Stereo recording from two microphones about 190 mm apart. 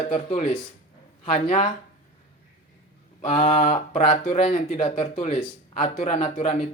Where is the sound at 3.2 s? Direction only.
30° left (ahead or behind).